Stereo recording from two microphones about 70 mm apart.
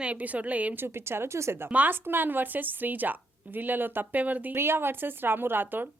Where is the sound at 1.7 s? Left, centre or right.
Right.